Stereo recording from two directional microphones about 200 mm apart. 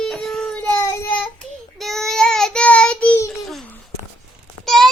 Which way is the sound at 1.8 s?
Centre (ahead or behind).